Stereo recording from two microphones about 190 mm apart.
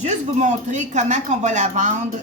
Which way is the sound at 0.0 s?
40° right (ahead or behind).